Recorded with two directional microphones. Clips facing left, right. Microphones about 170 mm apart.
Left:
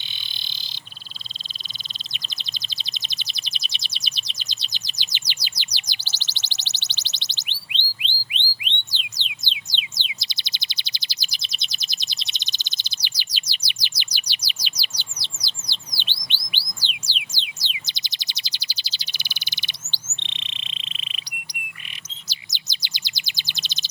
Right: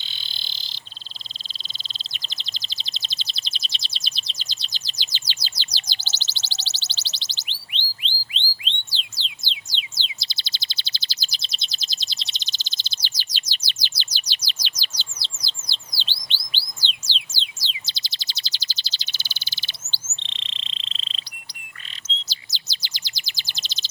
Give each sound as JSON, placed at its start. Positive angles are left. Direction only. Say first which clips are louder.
{"t": 0.3, "sound": "frog", "louder": "even", "side_deg": 20}
{"t": 2.1, "sound": "bird", "louder": "left 2 dB", "side_deg": 20}
{"t": 22.0, "sound": "chirp", "louder": "right 6 dB", "side_deg": 15}